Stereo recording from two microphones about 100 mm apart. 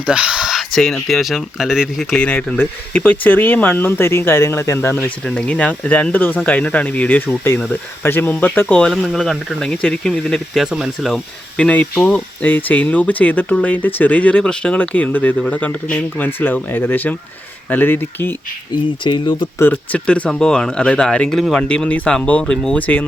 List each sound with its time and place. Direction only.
0.0 s speech: 10° right (ahead or behind)
2.1 s speech: 10° left (ahead or behind)
8.9 s speech: 5° left (ahead or behind)
11.1 s speech: 10° left (ahead or behind)
19.0 s speech: 55° left (ahead or behind)
19.5 s speech: 20° left (ahead or behind)